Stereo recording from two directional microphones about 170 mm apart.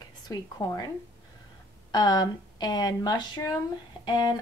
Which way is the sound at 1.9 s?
25° left (ahead or behind).